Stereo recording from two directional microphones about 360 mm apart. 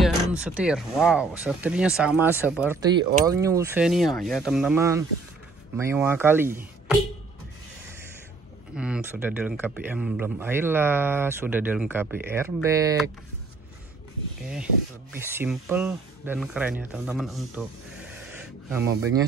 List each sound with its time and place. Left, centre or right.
0.0 s speech: centre
8.7 s speech: centre
15.1 s speech: centre
18.7 s speech: centre